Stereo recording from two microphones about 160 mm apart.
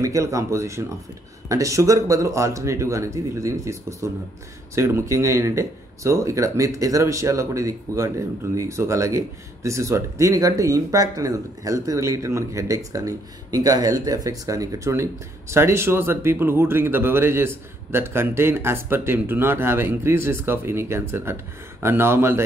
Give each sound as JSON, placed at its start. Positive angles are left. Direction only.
{"t": 0.0, "sound": "speech", "side_deg": -20}